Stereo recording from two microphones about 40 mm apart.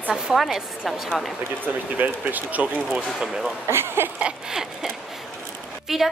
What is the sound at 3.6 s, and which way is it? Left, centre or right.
Speech, right.